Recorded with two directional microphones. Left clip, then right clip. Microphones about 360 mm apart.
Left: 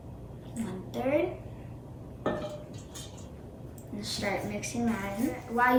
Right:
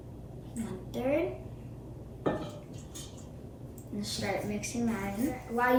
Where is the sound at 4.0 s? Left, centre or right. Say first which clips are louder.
Left 2 dB; centre.